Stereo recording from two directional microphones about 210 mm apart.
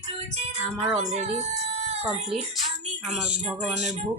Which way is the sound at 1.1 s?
30° right (ahead or behind).